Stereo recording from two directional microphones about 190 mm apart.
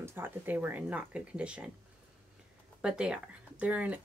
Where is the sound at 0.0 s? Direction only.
10° right (ahead or behind).